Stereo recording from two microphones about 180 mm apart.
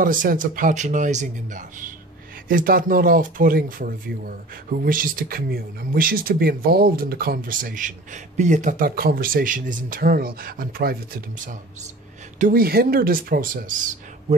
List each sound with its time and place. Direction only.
0.0 s speech: 50° right (ahead or behind)